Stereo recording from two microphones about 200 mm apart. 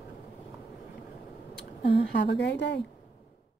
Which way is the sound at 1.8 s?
30° left (ahead or behind).